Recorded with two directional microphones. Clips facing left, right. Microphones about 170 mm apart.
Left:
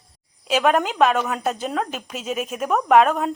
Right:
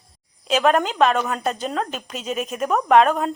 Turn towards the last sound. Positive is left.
turn(degrees=5)  # may be behind; listen again after turning